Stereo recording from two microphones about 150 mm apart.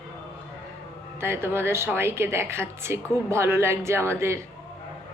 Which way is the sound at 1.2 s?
15° right (ahead or behind).